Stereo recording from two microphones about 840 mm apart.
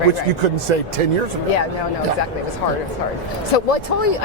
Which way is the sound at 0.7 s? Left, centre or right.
Right.